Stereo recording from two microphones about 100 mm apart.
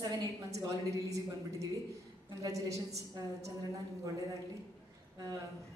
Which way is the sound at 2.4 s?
35° right (ahead or behind).